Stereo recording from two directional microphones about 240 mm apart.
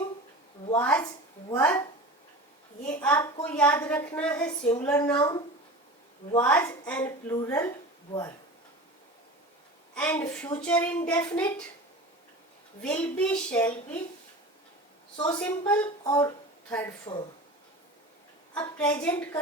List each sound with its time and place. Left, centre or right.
0.8 s a woman's voice: centre
2.8 s a woman's voice: centre
9.9 s a woman's voice: centre
12.8 s a woman's voice: centre
15.3 s a woman's voice: centre
18.8 s a woman's voice: centre